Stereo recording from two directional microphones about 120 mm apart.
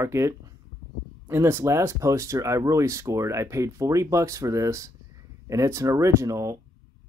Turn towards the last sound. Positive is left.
turn(degrees=-25)  # may be behind; listen again after turning